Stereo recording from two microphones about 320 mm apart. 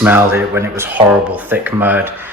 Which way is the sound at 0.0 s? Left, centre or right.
Centre.